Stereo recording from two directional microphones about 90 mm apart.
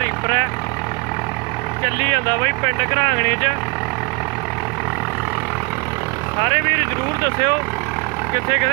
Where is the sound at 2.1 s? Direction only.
55° right (ahead or behind).